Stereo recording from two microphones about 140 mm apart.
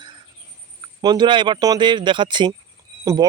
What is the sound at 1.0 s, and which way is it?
Speech, 30° right (ahead or behind).